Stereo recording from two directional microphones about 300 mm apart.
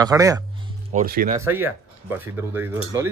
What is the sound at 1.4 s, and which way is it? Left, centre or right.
Speech, centre.